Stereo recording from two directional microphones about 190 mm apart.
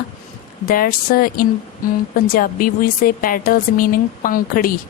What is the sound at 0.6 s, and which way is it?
A woman's voice, 50° left (ahead or behind).